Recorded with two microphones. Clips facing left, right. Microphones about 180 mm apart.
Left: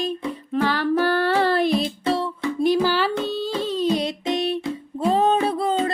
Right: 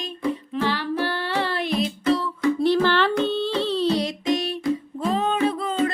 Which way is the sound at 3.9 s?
25° left (ahead or behind).